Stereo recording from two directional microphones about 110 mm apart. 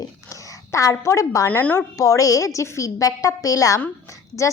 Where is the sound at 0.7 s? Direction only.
30° left (ahead or behind).